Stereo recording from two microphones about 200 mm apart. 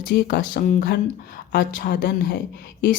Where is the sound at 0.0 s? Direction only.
55° left (ahead or behind).